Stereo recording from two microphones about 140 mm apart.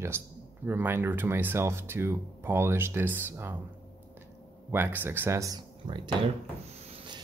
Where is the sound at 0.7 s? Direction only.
15° right (ahead or behind).